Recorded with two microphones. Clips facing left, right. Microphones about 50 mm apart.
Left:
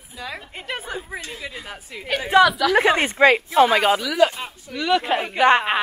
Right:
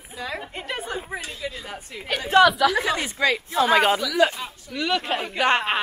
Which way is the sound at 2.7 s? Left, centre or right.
Left.